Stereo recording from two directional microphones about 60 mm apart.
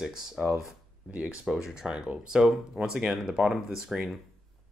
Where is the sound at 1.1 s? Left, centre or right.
Centre.